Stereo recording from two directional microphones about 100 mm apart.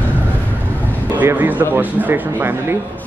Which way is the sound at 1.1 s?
20° right (ahead or behind).